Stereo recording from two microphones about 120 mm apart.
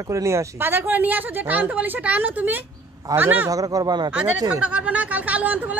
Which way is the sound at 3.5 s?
30° right (ahead or behind).